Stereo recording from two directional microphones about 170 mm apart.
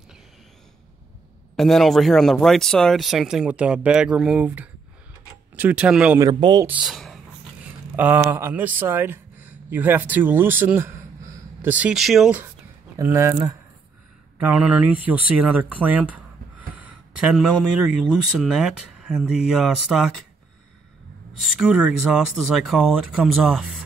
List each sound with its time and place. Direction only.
1.6 s speech: centre (ahead or behind)
6.1 s speech: 20° right (ahead or behind)
6.7 s speech: centre (ahead or behind)
7.9 s speech: 10° right (ahead or behind)
12.9 s speech: 20° right (ahead or behind)
14.4 s speech: 10° right (ahead or behind)
21.4 s speech: 5° right (ahead or behind)